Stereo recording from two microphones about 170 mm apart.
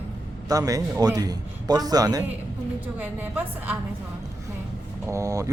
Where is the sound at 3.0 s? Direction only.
10° right (ahead or behind).